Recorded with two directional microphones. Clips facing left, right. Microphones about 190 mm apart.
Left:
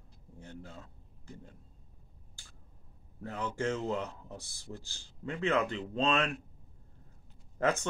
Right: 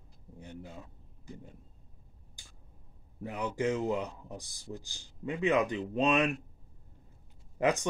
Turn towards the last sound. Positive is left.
turn(degrees=-15)  # may be behind; listen again after turning